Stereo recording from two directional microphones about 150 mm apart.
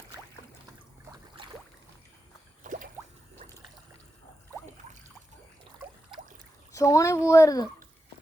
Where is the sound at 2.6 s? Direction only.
60° right (ahead or behind).